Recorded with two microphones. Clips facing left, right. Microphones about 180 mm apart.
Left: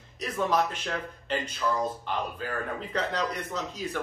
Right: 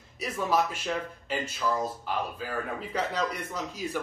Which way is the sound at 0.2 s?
5° right (ahead or behind).